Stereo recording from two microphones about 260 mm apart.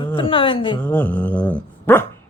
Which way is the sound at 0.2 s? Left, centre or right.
Centre.